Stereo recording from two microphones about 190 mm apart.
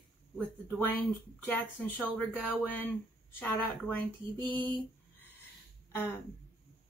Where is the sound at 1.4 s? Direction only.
10° left (ahead or behind).